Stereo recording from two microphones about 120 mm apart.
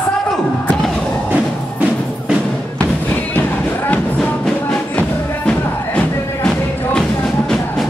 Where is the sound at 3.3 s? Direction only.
15° left (ahead or behind).